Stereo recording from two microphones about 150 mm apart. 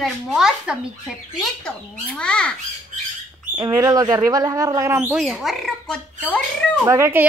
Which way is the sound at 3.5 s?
25° right (ahead or behind).